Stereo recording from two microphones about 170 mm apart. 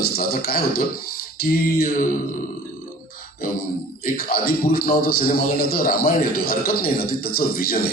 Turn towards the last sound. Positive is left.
turn(degrees=60)  # may be behind; listen again after turning